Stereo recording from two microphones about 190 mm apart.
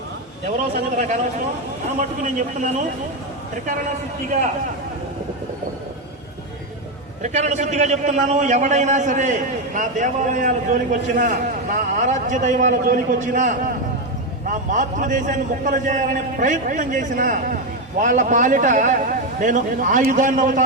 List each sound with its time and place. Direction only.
0.9 s a man's voice: 40° right (ahead or behind)
7.2 s a man's voice: 40° right (ahead or behind)